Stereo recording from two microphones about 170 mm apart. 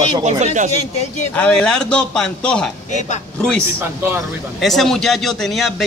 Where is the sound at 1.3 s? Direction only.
5° left (ahead or behind).